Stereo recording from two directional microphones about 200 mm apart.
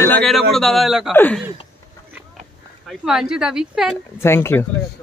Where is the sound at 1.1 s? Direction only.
10° left (ahead or behind).